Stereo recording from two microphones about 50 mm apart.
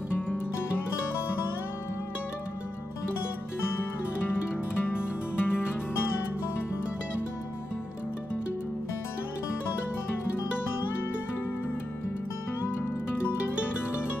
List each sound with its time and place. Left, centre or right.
4.8 s music: left